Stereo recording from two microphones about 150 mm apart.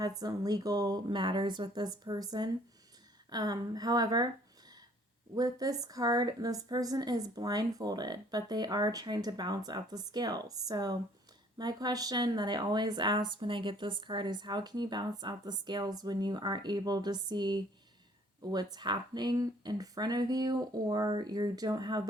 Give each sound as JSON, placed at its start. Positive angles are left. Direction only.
{"t": 0.2, "sound": "speech", "side_deg": -25}
{"t": 5.3, "sound": "speech", "side_deg": -25}